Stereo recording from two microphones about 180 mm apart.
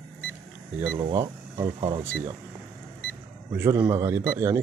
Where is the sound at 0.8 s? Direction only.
25° right (ahead or behind).